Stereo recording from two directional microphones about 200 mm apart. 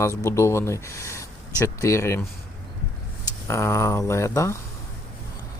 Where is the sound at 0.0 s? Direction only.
15° left (ahead or behind).